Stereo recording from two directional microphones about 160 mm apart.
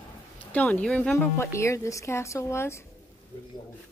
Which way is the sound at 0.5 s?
10° left (ahead or behind).